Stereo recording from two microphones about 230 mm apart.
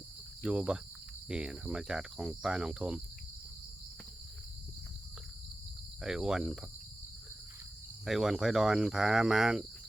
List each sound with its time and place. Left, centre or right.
0.4 s cricket: centre
6.0 s cricket: centre
8.0 s cricket: centre